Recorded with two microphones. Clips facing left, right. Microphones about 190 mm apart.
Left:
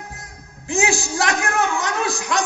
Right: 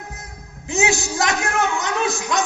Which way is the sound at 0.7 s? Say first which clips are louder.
Even; 20° right (ahead or behind).